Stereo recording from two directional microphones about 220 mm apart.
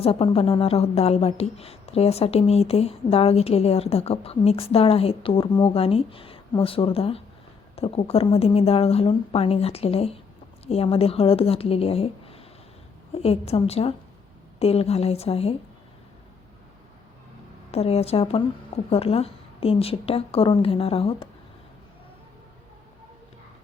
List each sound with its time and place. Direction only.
0.0 s a woman's voice: 25° left (ahead or behind)
17.7 s a woman's voice: 30° left (ahead or behind)